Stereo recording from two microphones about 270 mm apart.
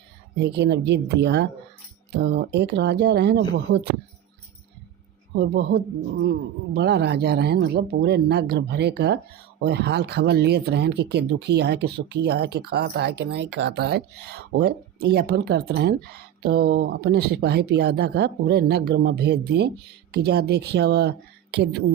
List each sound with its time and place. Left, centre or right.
0.3 s speech: right
5.3 s speech: right